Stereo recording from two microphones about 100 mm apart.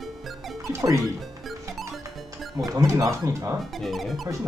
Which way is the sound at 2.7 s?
30° right (ahead or behind).